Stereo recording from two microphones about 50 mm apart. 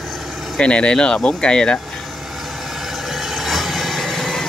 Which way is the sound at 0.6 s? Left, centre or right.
Left.